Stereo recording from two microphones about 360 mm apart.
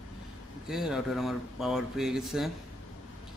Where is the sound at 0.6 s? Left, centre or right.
Centre.